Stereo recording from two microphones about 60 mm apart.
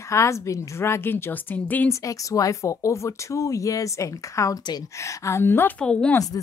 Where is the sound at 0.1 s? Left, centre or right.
Left.